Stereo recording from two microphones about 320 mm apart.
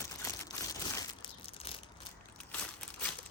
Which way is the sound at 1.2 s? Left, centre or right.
Centre.